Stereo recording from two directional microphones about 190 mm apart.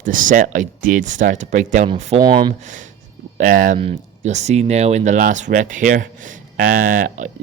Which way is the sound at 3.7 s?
35° right (ahead or behind).